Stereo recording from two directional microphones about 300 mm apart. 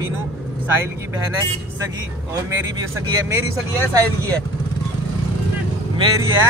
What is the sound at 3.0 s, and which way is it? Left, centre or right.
Speech, centre.